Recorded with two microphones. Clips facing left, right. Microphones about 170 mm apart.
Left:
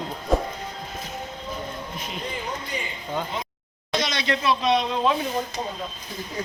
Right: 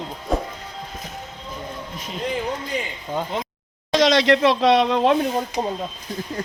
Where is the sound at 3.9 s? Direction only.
90° right; by 5.1 s 70° right (ahead or behind).